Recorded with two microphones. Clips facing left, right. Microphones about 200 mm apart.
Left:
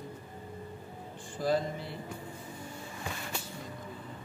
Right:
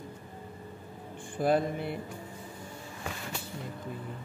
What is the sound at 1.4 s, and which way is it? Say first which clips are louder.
Speech: right 3 dB; 60° right (ahead or behind).